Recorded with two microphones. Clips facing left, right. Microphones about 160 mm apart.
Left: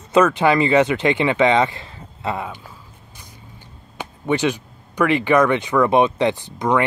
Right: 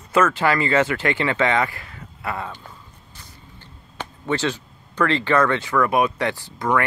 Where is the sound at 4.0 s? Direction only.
15° left (ahead or behind).